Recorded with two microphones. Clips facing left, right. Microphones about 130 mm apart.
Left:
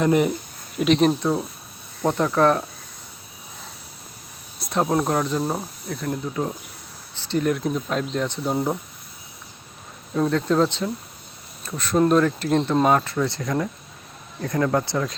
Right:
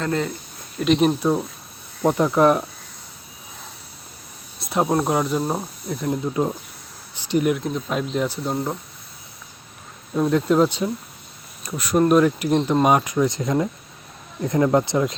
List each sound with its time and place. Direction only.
0.0 s speech: 15° left (ahead or behind)
0.8 s speech: centre (ahead or behind)
4.6 s speech: 5° right (ahead or behind); by 6.5 s 20° right (ahead or behind)
7.1 s a sound: 15° right (ahead or behind)
7.5 s speech: centre (ahead or behind)
8.5 s speech: 10° left (ahead or behind)
10.2 s speech: 10° right (ahead or behind)